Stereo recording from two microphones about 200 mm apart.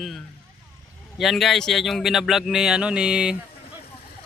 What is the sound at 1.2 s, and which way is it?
A man's voice, centre (ahead or behind).